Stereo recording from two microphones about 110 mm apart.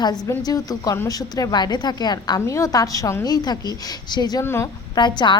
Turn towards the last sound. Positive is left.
turn(degrees=45)  # may be behind; listen again after turning